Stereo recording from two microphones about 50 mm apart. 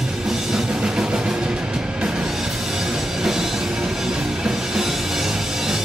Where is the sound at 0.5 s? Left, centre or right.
Centre.